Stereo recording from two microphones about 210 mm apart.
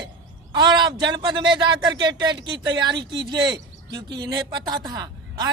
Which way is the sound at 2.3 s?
60° right (ahead or behind).